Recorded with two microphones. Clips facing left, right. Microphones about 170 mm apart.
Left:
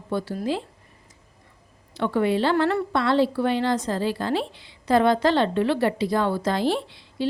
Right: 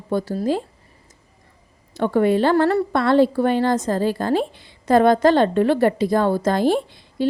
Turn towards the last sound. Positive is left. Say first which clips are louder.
# right 5 dB
turn(degrees=-50)  # may be behind; listen again after turning